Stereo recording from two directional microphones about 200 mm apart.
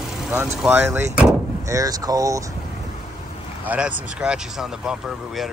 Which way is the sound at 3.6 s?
5° right (ahead or behind).